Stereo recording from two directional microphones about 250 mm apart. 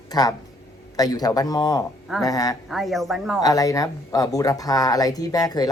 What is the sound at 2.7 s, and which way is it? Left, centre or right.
Speech, centre.